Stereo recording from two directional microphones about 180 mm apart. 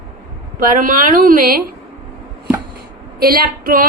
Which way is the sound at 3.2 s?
55° right (ahead or behind).